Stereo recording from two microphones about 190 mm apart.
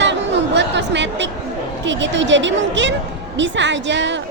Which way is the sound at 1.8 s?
70° right (ahead or behind).